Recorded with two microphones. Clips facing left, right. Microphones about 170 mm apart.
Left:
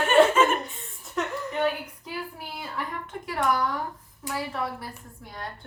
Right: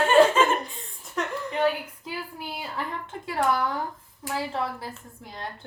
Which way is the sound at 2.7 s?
30° right (ahead or behind).